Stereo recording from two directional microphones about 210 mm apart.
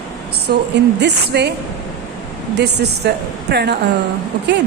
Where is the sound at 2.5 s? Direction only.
50° right (ahead or behind).